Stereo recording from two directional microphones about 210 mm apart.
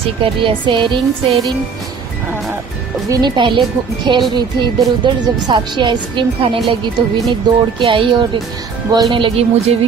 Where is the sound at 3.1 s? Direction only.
20° right (ahead or behind).